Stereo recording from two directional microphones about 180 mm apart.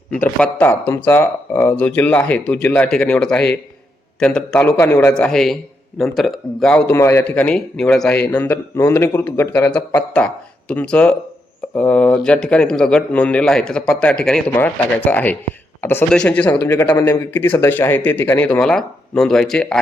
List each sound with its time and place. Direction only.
0.3 s a man's voice: 10° left (ahead or behind)
16.8 s a man's voice: 25° left (ahead or behind)
17.1 s a man's voice: 10° left (ahead or behind)